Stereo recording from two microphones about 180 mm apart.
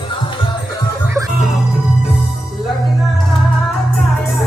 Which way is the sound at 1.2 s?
15° right (ahead or behind).